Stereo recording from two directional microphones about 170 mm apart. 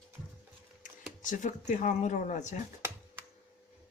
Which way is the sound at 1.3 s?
45° left (ahead or behind).